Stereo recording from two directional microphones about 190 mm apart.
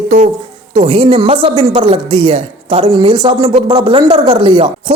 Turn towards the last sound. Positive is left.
turn(degrees=-25)  # may be behind; listen again after turning